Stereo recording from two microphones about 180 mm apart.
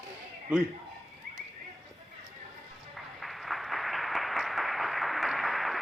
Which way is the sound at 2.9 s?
Centre (ahead or behind).